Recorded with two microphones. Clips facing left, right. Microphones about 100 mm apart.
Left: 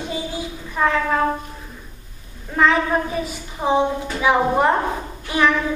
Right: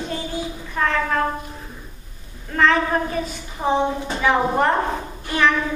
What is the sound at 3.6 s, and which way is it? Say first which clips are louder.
Speech: left 1 dB; 5° left (ahead or behind).